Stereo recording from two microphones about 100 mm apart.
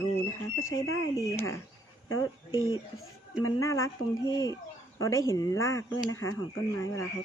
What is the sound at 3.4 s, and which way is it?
Speech, 30° left (ahead or behind).